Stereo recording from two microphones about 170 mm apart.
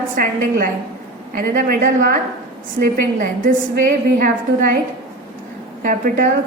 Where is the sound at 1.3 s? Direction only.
60° right (ahead or behind).